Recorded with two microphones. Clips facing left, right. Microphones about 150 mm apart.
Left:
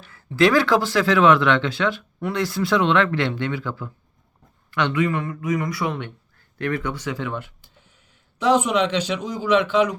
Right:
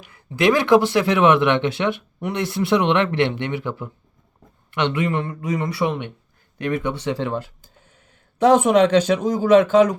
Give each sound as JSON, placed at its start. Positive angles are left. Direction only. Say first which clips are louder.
{"t": 0.0, "sound": "speech", "louder": "even", "side_deg": -20}